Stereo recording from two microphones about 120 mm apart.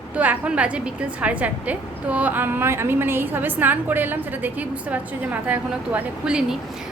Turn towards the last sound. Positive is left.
turn(degrees=-5)  # may be behind; listen again after turning